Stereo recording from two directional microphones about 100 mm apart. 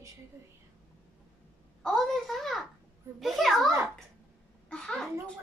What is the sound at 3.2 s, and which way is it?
Speech, centre (ahead or behind).